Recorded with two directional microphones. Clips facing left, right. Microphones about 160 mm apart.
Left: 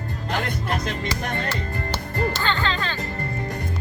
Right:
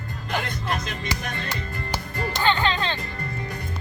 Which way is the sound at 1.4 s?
15° right (ahead or behind).